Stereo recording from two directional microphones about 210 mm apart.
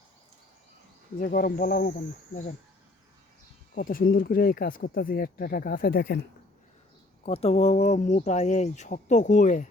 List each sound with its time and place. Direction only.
1.2 s speech: 45° left (ahead or behind)
3.8 s speech: 40° left (ahead or behind)
7.3 s speech: 30° left (ahead or behind)